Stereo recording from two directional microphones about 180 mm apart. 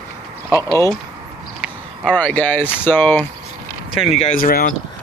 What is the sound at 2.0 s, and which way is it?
Speech, 5° left (ahead or behind).